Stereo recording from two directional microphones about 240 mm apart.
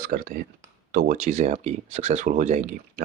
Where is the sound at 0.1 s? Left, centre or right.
Right.